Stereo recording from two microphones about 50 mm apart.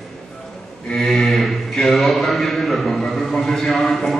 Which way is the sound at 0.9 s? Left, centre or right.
Centre.